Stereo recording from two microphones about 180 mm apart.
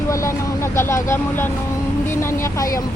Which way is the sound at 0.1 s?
15° left (ahead or behind).